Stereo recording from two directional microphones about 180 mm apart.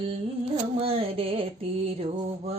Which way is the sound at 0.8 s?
30° right (ahead or behind).